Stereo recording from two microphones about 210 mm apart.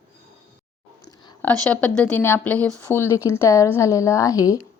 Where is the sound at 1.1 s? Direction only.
20° left (ahead or behind).